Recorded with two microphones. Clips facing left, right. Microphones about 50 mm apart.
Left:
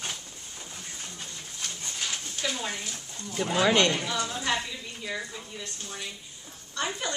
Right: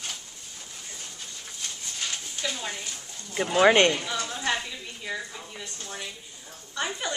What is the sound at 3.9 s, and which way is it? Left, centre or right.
Speech, centre.